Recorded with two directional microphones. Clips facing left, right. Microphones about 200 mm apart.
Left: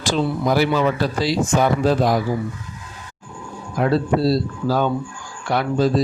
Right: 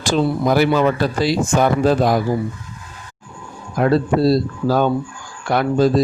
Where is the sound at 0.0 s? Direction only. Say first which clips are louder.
Right 3 dB; 50° right (ahead or behind).